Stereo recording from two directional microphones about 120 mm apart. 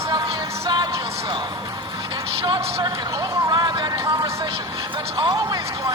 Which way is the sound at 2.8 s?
40° right (ahead or behind).